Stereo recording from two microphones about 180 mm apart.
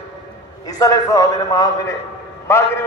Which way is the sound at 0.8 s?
20° left (ahead or behind).